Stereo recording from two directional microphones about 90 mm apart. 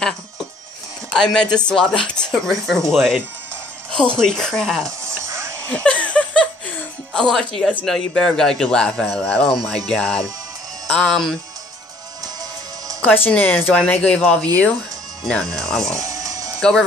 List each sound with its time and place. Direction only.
1.1 s speech: 5° left (ahead or behind)
4.2 s speech: 5° left (ahead or behind)
5.9 s a sound: 15° left (ahead or behind)
7.2 s speech: 5° left (ahead or behind)
13.0 s speech: 25° left (ahead or behind); by 15.9 s 5° left (ahead or behind)
15.9 s music: 40° right (ahead or behind)
16.5 s speech: 5° left (ahead or behind)